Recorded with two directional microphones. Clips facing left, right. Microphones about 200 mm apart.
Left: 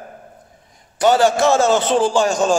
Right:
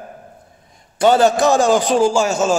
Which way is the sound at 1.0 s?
20° right (ahead or behind).